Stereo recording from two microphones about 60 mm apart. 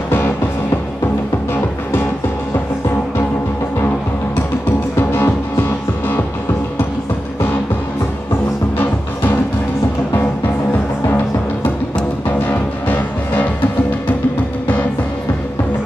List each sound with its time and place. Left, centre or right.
4.9 s music: left
12.3 s music: left